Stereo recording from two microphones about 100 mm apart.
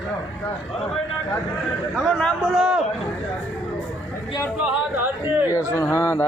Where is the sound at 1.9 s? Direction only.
5° left (ahead or behind).